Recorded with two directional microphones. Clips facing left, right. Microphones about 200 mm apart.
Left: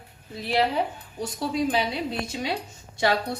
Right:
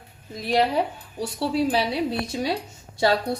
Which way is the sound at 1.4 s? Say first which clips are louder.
Right 3 dB; 30° right (ahead or behind).